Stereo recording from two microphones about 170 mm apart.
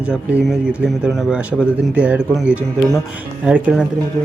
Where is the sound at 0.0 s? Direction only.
5° right (ahead or behind).